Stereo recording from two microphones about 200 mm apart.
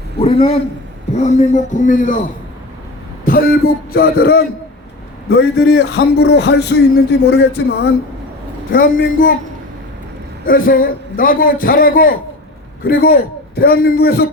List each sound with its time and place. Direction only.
0.2 s a man's voice: 30° left (ahead or behind)
3.2 s a man's voice: 45° left (ahead or behind)
8.7 s a man's voice: 45° left (ahead or behind)
10.4 s a man's voice: 45° left (ahead or behind)